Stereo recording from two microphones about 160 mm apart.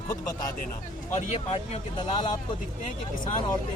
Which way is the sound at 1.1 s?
45° left (ahead or behind).